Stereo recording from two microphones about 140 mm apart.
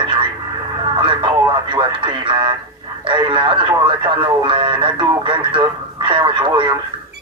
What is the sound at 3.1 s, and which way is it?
Speech, 35° right (ahead or behind).